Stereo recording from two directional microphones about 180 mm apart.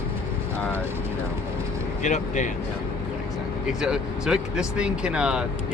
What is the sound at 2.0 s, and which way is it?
Speech, 40° left (ahead or behind).